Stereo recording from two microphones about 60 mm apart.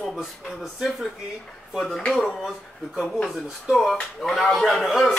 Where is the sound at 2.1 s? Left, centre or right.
Centre.